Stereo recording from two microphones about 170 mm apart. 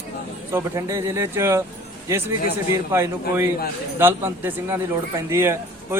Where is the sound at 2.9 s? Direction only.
15° right (ahead or behind).